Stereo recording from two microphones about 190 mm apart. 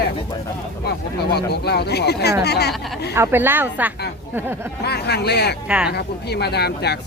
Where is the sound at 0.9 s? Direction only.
60° left (ahead or behind).